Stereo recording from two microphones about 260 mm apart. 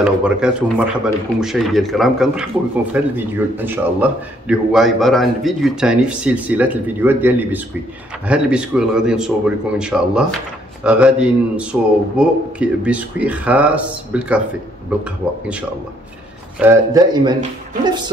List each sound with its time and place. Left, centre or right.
0.0 s a man's voice: centre